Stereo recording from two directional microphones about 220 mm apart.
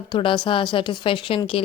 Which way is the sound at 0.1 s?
20° left (ahead or behind).